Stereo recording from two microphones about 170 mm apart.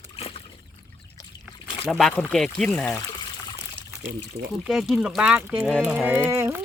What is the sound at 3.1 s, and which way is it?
Trickle, 25° left (ahead or behind).